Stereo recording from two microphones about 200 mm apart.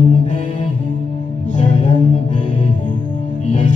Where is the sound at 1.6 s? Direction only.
35° left (ahead or behind).